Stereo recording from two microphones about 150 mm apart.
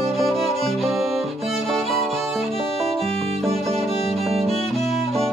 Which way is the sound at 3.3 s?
45° right (ahead or behind).